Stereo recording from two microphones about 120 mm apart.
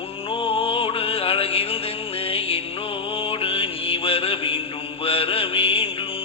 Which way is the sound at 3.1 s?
50° left (ahead or behind).